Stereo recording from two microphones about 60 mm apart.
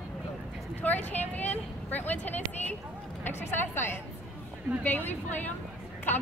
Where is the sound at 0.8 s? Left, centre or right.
Left.